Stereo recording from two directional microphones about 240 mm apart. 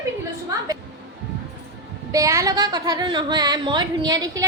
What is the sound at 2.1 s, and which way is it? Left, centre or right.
A woman's voice, centre.